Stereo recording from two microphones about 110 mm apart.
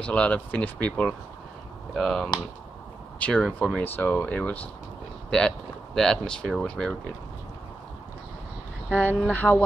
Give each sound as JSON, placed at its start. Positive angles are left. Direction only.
{"t": 0.0, "sound": "speech", "side_deg": 10}
{"t": 5.9, "sound": "speech", "side_deg": 5}
{"t": 8.9, "sound": "speech", "side_deg": 15}